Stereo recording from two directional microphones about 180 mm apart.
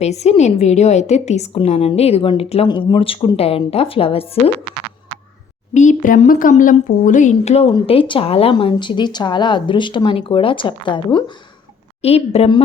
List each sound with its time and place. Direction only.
0.0 s a woman's voice: 35° left (ahead or behind)
5.7 s a woman's voice: 45° left (ahead or behind)